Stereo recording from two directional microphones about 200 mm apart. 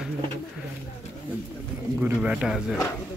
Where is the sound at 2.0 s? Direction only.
5° right (ahead or behind).